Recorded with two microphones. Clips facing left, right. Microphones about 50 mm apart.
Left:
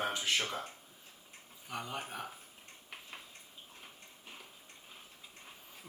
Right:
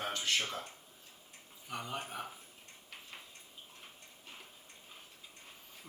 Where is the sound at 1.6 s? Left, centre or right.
Centre.